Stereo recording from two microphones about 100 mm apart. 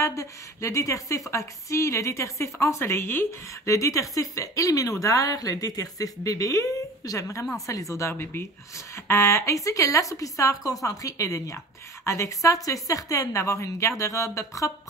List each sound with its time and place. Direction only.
0.0 s a woman's voice: 30° left (ahead or behind)